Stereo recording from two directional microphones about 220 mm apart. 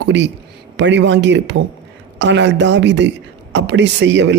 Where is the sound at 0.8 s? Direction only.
55° right (ahead or behind).